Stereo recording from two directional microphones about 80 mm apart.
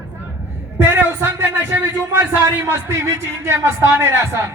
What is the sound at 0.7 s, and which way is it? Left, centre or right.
A man's voice, right.